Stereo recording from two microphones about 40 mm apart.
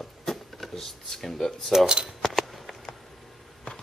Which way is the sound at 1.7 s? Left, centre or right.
Centre.